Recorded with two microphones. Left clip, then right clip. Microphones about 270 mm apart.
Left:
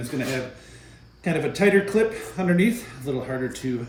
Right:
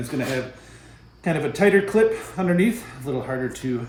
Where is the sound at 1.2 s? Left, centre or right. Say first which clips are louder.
Right 1 dB; centre.